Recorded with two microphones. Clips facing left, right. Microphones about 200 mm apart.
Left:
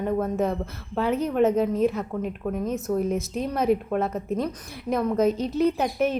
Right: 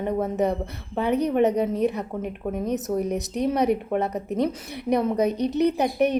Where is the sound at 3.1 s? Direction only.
65° right (ahead or behind).